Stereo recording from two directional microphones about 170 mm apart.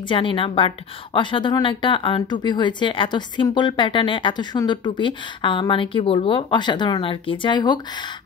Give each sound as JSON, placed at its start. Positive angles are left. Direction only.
{"t": 0.1, "sound": "a woman's voice", "side_deg": 30}